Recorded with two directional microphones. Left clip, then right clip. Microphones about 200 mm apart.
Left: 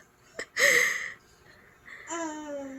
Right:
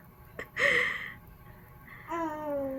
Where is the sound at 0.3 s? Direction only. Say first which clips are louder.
Left 4 dB; 40° left (ahead or behind).